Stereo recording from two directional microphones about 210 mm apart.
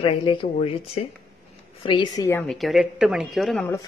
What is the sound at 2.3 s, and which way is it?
A woman's voice, 5° left (ahead or behind).